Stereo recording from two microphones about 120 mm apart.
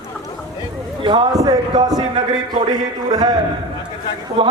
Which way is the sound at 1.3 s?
30° right (ahead or behind).